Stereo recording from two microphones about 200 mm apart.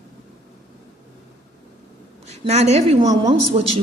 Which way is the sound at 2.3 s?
30° right (ahead or behind).